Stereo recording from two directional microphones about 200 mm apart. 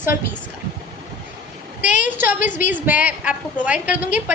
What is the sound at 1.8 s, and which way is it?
Speech, 40° left (ahead or behind).